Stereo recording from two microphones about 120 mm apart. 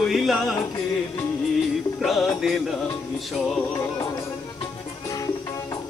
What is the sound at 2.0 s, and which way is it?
Speech, centre (ahead or behind).